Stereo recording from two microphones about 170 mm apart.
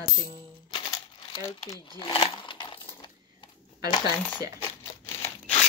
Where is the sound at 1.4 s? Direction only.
20° left (ahead or behind).